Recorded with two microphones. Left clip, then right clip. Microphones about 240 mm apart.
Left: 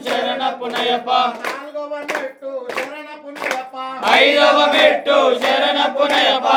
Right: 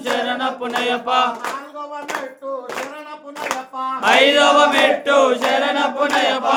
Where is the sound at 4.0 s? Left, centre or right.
Right.